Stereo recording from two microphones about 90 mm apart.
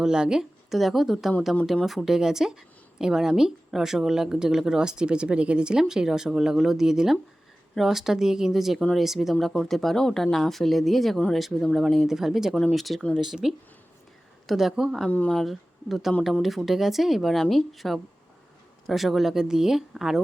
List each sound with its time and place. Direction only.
0.0 s speech: 10° right (ahead or behind)
15.1 s speech: 15° left (ahead or behind)
15.4 s speech: centre (ahead or behind)